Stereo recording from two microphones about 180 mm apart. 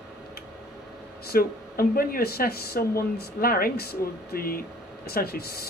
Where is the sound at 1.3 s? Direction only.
55° left (ahead or behind).